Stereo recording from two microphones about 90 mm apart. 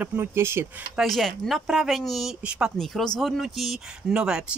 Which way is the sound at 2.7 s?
5° left (ahead or behind).